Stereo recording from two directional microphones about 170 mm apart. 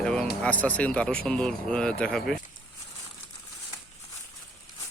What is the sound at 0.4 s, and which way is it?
Speech, 10° left (ahead or behind).